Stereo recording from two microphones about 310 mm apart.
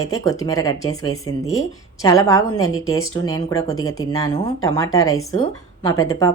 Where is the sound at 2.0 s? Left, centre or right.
Centre.